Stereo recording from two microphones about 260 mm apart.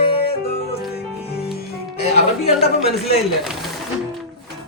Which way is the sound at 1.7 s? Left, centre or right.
Left.